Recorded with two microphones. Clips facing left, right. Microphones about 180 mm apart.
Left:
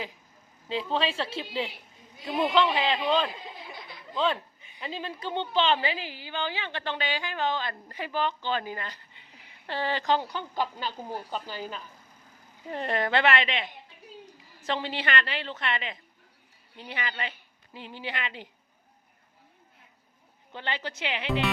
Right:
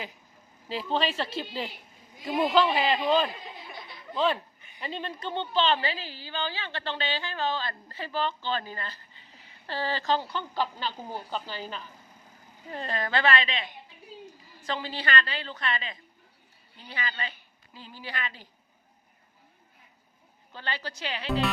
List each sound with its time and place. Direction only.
0.7 s a woman's voice: centre (ahead or behind)
5.3 s a woman's voice: 15° left (ahead or behind)
12.7 s a woman's voice: 25° left (ahead or behind)
20.5 s a woman's voice: 20° left (ahead or behind)